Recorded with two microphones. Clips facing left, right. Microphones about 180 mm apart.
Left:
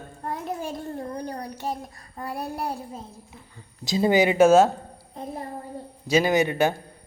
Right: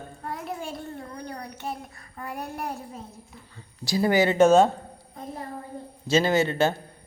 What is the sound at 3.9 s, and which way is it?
Speech, 20° left (ahead or behind).